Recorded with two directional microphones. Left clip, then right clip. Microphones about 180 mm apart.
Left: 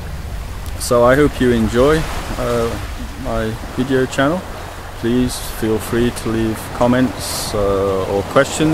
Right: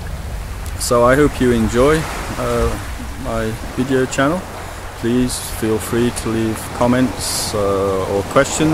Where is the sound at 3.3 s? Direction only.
15° left (ahead or behind).